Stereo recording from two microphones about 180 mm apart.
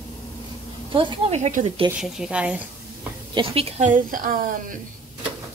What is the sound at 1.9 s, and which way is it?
Speech, 5° right (ahead or behind).